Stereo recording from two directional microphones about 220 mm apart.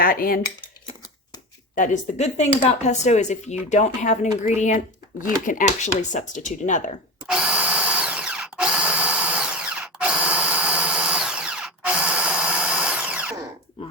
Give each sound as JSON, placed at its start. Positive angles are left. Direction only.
{"t": 0.0, "sound": "speech", "side_deg": 40}
{"t": 1.7, "sound": "speech", "side_deg": 35}
{"t": 7.3, "sound": "drill", "side_deg": -5}